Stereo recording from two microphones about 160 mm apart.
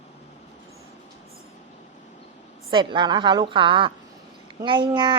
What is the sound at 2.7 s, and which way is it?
A woman's voice, 30° right (ahead or behind).